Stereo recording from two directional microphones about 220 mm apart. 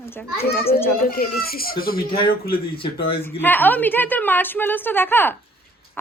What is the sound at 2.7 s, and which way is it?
Speech, 25° left (ahead or behind).